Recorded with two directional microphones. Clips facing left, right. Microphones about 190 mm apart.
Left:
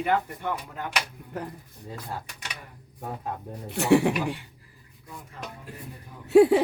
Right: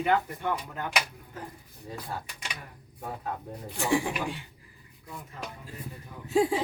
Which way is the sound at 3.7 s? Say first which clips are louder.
Left 7 dB; 65° left (ahead or behind).